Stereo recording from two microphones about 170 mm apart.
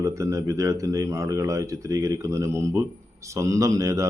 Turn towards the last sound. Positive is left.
turn(degrees=-20)  # may be behind; listen again after turning